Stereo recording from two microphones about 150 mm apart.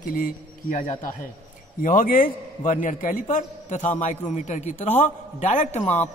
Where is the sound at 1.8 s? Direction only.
65° left (ahead or behind).